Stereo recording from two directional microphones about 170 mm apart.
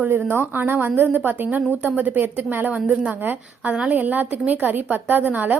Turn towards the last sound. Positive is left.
turn(degrees=-10)  # may be behind; listen again after turning